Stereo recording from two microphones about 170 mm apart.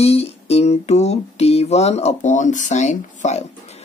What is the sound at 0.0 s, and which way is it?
Speech, 35° left (ahead or behind).